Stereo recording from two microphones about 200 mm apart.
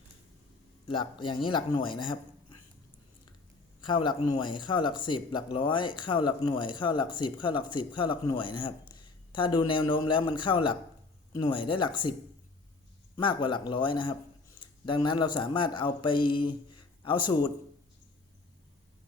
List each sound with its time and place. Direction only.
0.9 s speech: 25° left (ahead or behind)
3.8 s speech: 25° left (ahead or behind)
13.1 s speech: 25° left (ahead or behind)